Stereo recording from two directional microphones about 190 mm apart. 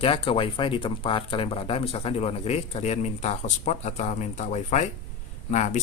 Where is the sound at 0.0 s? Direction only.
30° left (ahead or behind).